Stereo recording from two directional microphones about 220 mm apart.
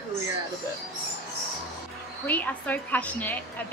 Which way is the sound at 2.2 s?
5° left (ahead or behind).